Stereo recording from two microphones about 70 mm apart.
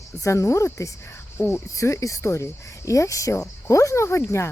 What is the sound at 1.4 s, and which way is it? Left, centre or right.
Speech, left.